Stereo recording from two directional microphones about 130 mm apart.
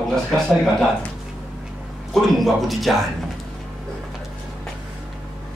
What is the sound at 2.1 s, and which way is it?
Speech, centre (ahead or behind).